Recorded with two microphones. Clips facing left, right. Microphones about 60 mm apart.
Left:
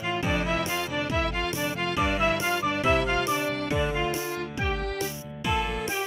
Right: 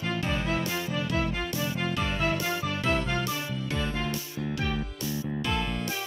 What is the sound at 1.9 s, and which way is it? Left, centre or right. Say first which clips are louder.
Music: left 6 dB; centre.